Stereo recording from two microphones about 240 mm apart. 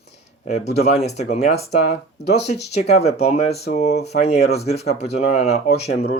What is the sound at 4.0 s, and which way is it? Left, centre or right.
Speech, left.